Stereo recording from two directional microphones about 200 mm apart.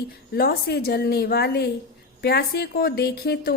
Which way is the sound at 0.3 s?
50° left (ahead or behind).